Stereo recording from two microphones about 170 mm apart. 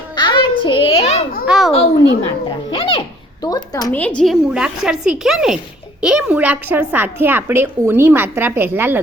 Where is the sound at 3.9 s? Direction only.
10° left (ahead or behind).